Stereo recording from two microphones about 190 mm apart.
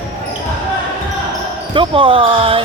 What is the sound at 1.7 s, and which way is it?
Speech, 25° right (ahead or behind).